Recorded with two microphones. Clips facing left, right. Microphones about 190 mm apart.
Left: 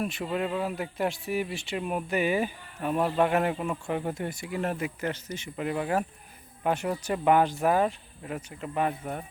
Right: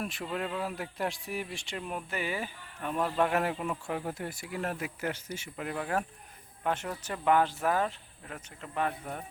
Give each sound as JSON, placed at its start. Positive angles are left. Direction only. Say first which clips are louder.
{"t": 0.0, "sound": "speech", "louder": "left 5 dB", "side_deg": 0}
{"t": 5.5, "sound": "speech", "louder": "left 5 dB", "side_deg": 5}